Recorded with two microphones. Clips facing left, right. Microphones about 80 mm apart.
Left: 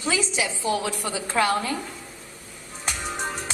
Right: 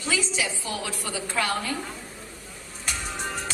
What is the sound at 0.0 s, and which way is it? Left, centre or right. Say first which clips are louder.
A woman's voice: left 2 dB; left.